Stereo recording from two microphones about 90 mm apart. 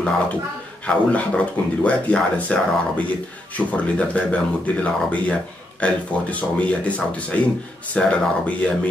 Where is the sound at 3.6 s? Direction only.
15° left (ahead or behind).